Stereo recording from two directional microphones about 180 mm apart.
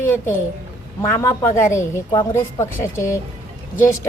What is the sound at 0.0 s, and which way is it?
A woman's voice, 10° left (ahead or behind).